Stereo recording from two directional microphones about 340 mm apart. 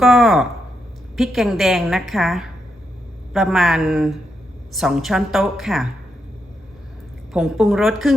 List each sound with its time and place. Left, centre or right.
0.0 s a woman's voice: centre
7.3 s a woman's voice: centre